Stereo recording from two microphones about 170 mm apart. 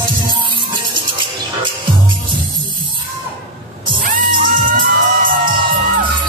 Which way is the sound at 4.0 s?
55° right (ahead or behind).